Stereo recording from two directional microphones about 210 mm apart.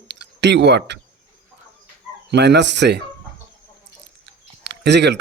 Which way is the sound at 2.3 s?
55° right (ahead or behind).